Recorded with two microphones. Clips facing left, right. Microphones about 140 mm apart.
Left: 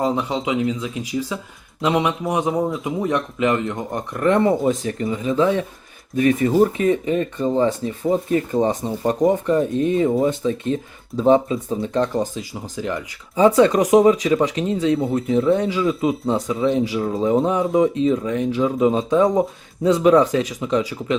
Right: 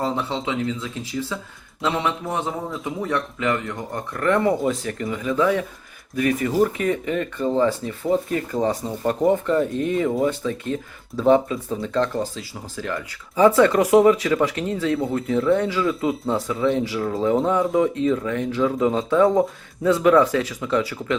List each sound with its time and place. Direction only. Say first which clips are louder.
0.0 s speech: left 3 dB; 15° left (ahead or behind)